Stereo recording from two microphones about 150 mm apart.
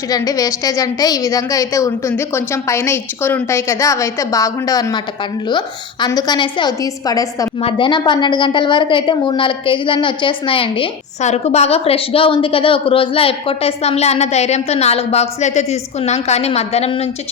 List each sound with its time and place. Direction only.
0.1 s a woman's voice: 25° left (ahead or behind)
11.2 s a woman's voice: 50° left (ahead or behind)